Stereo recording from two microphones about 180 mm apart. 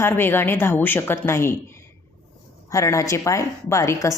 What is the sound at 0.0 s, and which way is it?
A woman's voice, 10° left (ahead or behind).